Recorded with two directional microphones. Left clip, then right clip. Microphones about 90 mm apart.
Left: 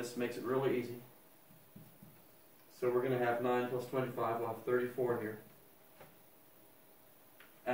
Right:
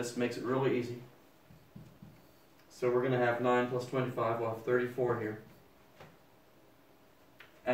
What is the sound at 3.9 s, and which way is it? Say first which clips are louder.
Speech: right 3 dB; 25° right (ahead or behind).